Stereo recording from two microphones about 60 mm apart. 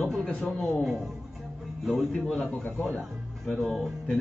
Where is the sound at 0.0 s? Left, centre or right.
Centre.